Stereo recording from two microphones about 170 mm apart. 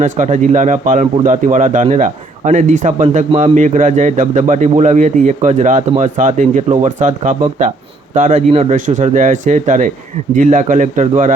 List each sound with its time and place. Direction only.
0.0 s a man's voice: 45° right (ahead or behind)